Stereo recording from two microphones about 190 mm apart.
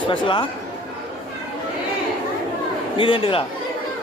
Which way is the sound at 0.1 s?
25° left (ahead or behind).